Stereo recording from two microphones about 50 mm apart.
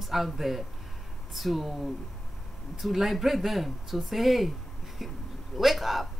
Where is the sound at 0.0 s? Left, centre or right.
Centre.